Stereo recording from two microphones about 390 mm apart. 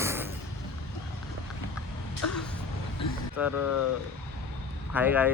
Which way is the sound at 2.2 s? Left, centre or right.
Left.